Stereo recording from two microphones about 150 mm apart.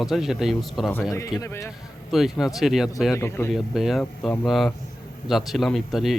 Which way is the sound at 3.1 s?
20° left (ahead or behind).